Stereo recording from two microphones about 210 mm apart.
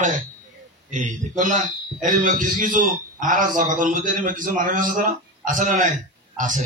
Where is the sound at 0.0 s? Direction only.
35° right (ahead or behind).